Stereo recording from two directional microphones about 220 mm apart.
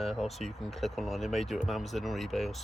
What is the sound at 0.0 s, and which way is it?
Speech, centre (ahead or behind).